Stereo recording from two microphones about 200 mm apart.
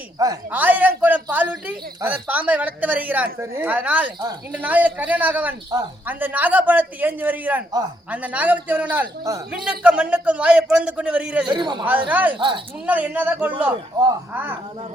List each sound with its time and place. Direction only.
0.2 s a man's voice: 15° right (ahead or behind)
11.4 s a man's voice: 20° right (ahead or behind)
12.0 s a man's voice: 10° right (ahead or behind)
12.4 s a man's voice: 25° right (ahead or behind)
12.8 s a man's voice: 10° right (ahead or behind)